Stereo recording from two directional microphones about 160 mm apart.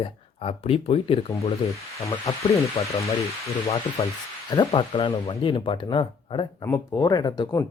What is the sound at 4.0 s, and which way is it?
Speech, 40° left (ahead or behind).